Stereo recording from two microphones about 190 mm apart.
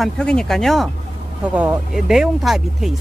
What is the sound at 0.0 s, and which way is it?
Speech, 5° left (ahead or behind).